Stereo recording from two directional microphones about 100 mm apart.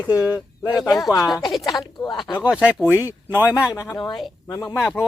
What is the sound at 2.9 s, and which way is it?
Speech, 20° right (ahead or behind).